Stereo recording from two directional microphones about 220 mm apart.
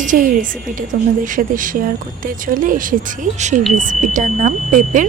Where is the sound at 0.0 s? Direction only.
35° right (ahead or behind).